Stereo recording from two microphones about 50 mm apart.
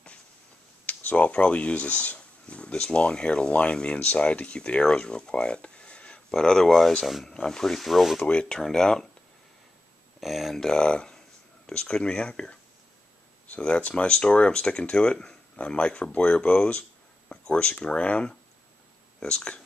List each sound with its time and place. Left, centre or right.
0.8 s speech: left
6.3 s speech: centre
7.2 s speech: centre
8.2 s speech: left
10.2 s speech: centre
10.6 s speech: centre
13.6 s speech: left